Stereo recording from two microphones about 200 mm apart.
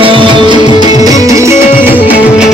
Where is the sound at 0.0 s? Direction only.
25° right (ahead or behind).